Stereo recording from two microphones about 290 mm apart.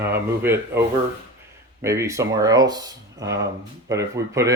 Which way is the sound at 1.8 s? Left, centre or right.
Centre.